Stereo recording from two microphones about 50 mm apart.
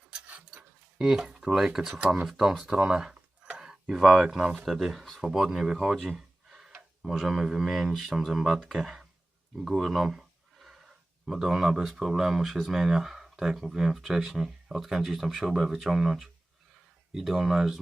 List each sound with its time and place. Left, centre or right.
0.9 s speech: centre
1.9 s speech: right
2.2 s speech: centre